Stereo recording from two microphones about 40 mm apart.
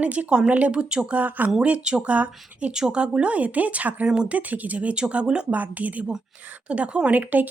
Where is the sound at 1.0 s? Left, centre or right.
Right.